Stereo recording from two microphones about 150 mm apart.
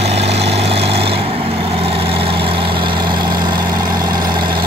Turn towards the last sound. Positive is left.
turn(degrees=-30)  # may be behind; listen again after turning